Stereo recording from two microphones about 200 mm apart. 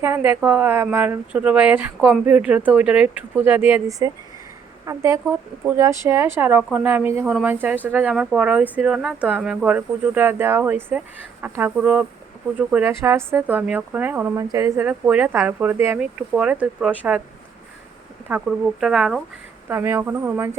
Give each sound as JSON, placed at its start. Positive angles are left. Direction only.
{"t": 0.0, "sound": "speech", "side_deg": -10}
{"t": 18.3, "sound": "speech", "side_deg": -5}